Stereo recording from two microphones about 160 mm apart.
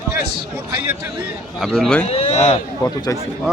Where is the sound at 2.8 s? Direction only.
25° left (ahead or behind).